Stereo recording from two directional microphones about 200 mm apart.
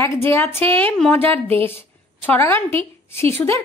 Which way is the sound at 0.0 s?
10° left (ahead or behind).